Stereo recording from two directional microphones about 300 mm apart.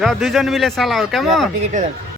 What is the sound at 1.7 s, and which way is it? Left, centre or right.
Speech, right.